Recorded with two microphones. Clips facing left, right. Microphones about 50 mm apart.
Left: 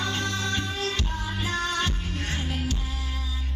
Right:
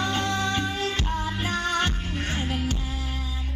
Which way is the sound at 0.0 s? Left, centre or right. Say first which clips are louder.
Right 3 dB; right.